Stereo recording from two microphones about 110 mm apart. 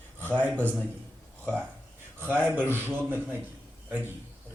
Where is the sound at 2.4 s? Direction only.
20° right (ahead or behind).